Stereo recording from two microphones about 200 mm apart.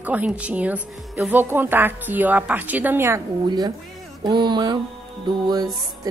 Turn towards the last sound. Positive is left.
turn(degrees=-20)  # may be behind; listen again after turning